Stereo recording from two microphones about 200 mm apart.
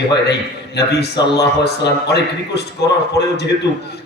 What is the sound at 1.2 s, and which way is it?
Speech, 20° left (ahead or behind).